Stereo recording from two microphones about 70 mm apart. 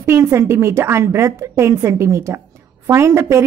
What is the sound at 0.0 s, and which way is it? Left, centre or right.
A woman's voice, right.